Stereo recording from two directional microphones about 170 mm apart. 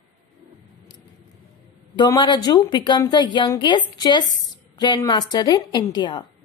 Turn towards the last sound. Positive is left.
turn(degrees=25)  # may be behind; listen again after turning